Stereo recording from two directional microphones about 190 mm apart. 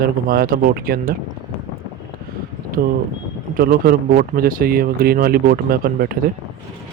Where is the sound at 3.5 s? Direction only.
50° right (ahead or behind).